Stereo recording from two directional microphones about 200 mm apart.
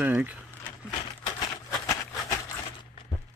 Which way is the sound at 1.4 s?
15° left (ahead or behind).